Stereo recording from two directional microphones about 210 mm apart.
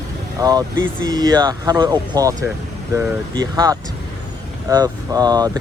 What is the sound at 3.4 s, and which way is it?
Speech, 20° right (ahead or behind).